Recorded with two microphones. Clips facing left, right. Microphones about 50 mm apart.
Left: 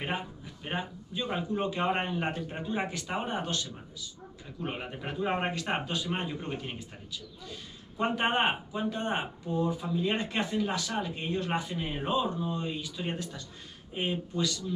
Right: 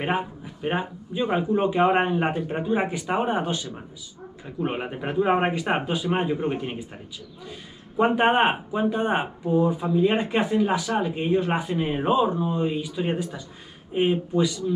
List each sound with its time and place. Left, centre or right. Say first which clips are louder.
0.0 s speech: right 8 dB; right
8.0 s speech: right 8 dB; right